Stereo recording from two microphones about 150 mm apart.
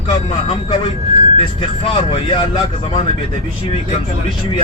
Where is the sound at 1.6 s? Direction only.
35° left (ahead or behind).